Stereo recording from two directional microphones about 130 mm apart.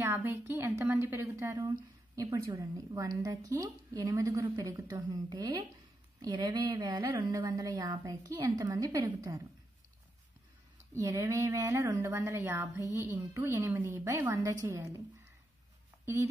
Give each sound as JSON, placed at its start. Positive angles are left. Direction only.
{"t": 0.0, "sound": "a woman's voice", "side_deg": -15}
{"t": 11.0, "sound": "a woman's voice", "side_deg": -25}